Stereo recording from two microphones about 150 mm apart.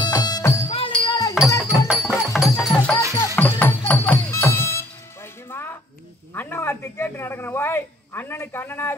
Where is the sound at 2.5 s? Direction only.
5° left (ahead or behind).